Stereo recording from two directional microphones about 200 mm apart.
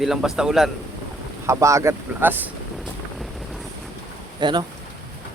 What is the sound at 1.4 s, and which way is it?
Speech, 15° right (ahead or behind).